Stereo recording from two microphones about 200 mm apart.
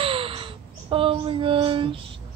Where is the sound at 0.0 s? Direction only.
25° right (ahead or behind).